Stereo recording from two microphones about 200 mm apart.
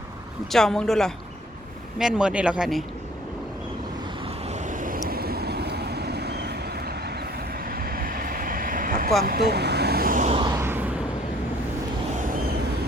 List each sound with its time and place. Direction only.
0.5 s speech: centre (ahead or behind)
4.4 s vehicle: 35° right (ahead or behind)
10.5 s vehicle: 10° right (ahead or behind)
12.1 s vehicle: 40° right (ahead or behind)